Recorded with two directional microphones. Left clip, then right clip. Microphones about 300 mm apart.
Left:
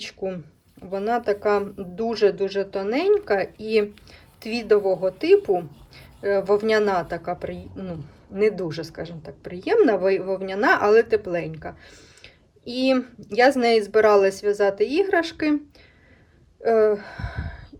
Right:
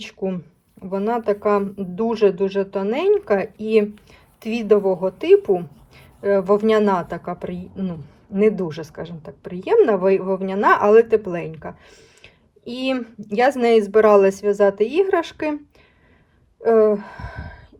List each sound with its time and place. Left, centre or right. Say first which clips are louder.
0.0 s speech: right 3 dB; centre
16.6 s speech: right 3 dB; centre